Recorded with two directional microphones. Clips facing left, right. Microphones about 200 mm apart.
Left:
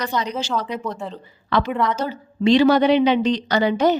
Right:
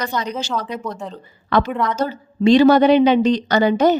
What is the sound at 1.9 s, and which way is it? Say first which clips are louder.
A woman's voice: right 3 dB; 45° right (ahead or behind).